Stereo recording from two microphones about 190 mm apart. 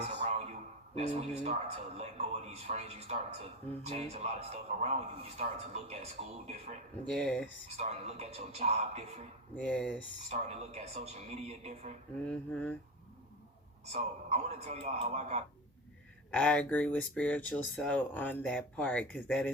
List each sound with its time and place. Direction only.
0.0 s a sound: 35° right (ahead or behind)
0.9 s speech: 35° right (ahead or behind)
7.1 s speech: 5° left (ahead or behind)
7.8 s speech: 35° right (ahead or behind)
9.6 s speech: 5° left (ahead or behind)
10.2 s speech: 35° right (ahead or behind)
12.2 s speech: 5° left (ahead or behind)
13.9 s speech: 35° right (ahead or behind)
16.3 s speech: 5° left (ahead or behind)